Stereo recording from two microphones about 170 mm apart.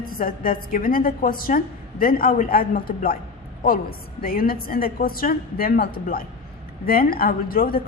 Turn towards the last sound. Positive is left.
turn(degrees=60)  # may be behind; listen again after turning